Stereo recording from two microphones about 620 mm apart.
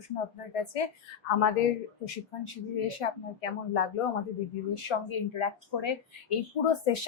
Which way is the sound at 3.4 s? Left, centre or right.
Left.